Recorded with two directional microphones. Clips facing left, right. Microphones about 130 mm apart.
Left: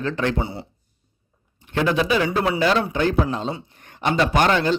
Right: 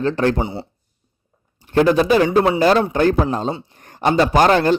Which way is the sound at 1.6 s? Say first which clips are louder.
Right 6 dB; 40° right (ahead or behind).